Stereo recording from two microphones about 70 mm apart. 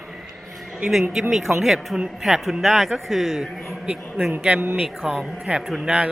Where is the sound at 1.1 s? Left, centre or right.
Centre.